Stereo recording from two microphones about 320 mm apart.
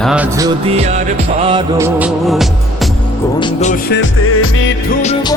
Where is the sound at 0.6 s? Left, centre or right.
Centre.